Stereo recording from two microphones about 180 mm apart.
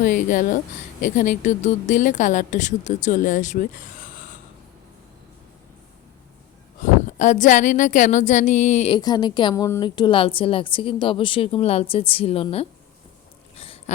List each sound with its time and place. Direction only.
0.0 s a woman's voice: 45° left (ahead or behind)
7.2 s a woman's voice: 45° left (ahead or behind)
8.9 s a woman's voice: 25° left (ahead or behind)
13.6 s a sound: 30° left (ahead or behind)